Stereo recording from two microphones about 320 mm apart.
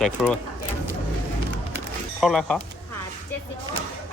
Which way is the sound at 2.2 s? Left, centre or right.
Centre.